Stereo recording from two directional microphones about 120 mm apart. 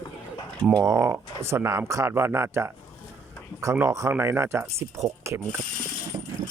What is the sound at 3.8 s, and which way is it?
Speech, 25° right (ahead or behind).